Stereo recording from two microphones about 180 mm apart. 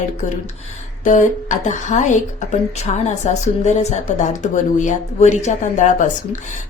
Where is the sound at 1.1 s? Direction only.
45° left (ahead or behind).